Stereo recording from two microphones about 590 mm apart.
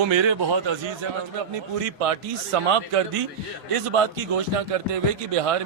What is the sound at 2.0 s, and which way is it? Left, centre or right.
A man's voice, right.